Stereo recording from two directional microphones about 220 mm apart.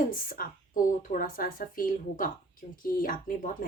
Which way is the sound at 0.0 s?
40° left (ahead or behind).